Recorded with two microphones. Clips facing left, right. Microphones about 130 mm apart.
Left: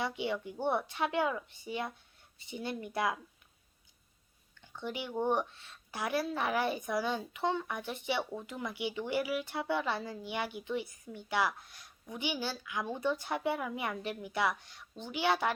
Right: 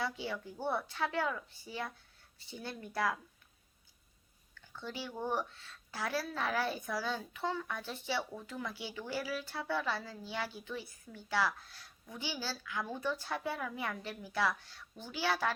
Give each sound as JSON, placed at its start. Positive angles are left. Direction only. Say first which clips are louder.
{"t": 0.0, "sound": "a woman's voice", "louder": "left 4 dB", "side_deg": 20}
{"t": 4.6, "sound": "a woman's voice", "louder": "left 4 dB", "side_deg": 15}